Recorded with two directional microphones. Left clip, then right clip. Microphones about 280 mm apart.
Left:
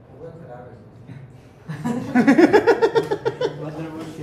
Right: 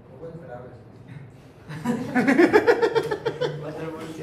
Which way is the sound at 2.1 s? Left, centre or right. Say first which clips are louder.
Left 3 dB; left.